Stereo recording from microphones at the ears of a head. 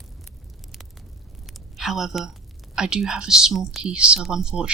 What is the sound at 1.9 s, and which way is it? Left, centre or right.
Speech, right.